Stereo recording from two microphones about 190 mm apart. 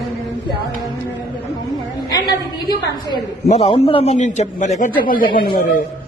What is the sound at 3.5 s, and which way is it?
A man's voice, 35° left (ahead or behind).